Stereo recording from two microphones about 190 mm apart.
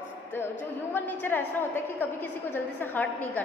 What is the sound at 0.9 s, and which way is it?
A woman's voice, 10° left (ahead or behind).